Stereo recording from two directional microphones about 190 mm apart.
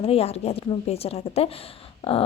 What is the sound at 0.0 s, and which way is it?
A woman's voice, 30° left (ahead or behind).